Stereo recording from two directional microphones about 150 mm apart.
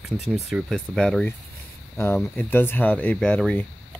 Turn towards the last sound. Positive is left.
turn(degrees=10)  # may be behind; listen again after turning